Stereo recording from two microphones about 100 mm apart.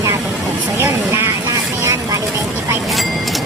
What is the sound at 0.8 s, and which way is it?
Vehicle, 25° right (ahead or behind).